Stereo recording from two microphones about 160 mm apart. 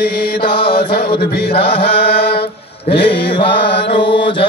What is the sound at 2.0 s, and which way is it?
Mantra, 85° left.